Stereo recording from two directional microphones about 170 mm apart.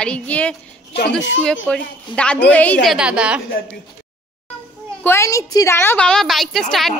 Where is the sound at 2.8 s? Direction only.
5° right (ahead or behind).